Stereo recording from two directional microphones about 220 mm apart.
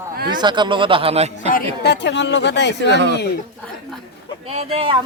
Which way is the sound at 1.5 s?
45° left (ahead or behind).